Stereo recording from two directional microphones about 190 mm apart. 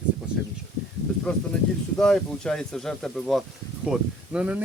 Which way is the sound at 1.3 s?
5° left (ahead or behind).